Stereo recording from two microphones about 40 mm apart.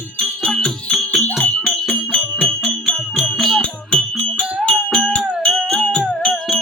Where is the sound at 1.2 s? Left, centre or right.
Left.